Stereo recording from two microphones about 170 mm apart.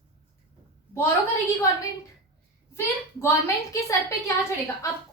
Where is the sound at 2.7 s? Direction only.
15° left (ahead or behind).